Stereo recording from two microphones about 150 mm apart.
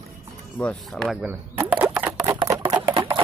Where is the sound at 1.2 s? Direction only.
10° right (ahead or behind).